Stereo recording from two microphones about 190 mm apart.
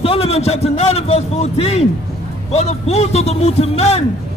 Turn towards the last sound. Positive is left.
turn(degrees=35)  # may be behind; listen again after turning